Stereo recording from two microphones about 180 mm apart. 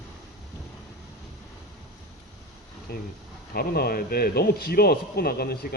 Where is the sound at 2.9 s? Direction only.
60° left (ahead or behind).